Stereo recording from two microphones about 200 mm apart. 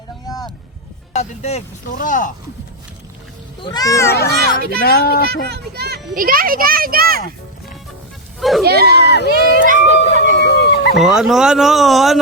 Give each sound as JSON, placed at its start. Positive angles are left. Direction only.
{"t": 1.1, "sound": "speech", "side_deg": 35}
{"t": 3.6, "sound": "speech", "side_deg": 20}
{"t": 4.8, "sound": "speech", "side_deg": 50}
{"t": 5.2, "sound": "a child's voice", "side_deg": -55}
{"t": 8.4, "sound": "speech", "side_deg": 0}
{"t": 8.6, "sound": "a child's voice", "side_deg": -50}
{"t": 9.0, "sound": "speech", "side_deg": 55}
{"t": 9.2, "sound": "a sound", "side_deg": -50}
{"t": 10.2, "sound": "a sound", "side_deg": 55}
{"t": 10.9, "sound": "speech", "side_deg": -5}